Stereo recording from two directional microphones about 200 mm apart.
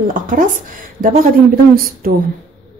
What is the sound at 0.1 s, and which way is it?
Speech, 45° right (ahead or behind).